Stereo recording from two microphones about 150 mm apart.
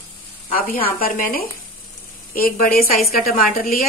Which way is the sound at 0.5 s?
65° left (ahead or behind).